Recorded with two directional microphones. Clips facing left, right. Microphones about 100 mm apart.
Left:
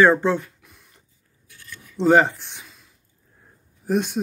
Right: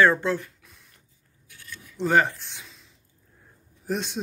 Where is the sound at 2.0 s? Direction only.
15° left (ahead or behind).